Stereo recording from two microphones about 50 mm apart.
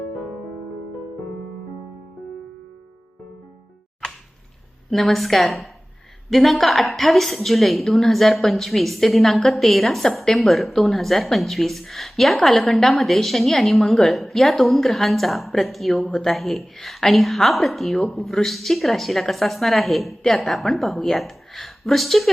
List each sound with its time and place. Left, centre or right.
4.9 s a woman's voice: centre